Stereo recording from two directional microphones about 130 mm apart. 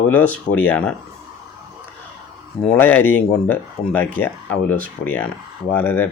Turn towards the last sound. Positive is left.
turn(degrees=15)  # may be behind; listen again after turning